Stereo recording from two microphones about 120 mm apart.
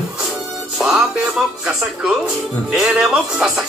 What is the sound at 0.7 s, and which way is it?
A man's voice, 5° right (ahead or behind).